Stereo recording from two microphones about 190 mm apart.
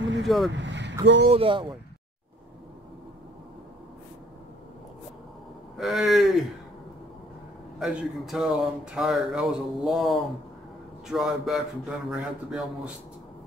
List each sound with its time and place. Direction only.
0.2 s vehicle: centre (ahead or behind)
0.5 s vehicle: 70° right (ahead or behind)
1.0 s speech: 70° right (ahead or behind)
1.3 s speech: 25° right (ahead or behind)
5.8 s speech: centre (ahead or behind)
7.8 s speech: centre (ahead or behind)